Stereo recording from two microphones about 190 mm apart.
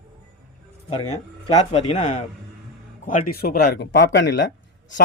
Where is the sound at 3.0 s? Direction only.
50° left (ahead or behind).